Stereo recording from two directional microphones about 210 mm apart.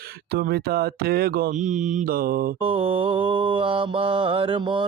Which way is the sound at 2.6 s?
25° right (ahead or behind).